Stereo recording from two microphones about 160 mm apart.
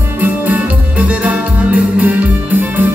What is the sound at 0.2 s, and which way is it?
Music, 10° right (ahead or behind).